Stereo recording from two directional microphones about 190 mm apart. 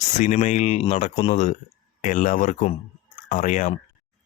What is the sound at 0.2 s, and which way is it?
Speech, 40° left (ahead or behind).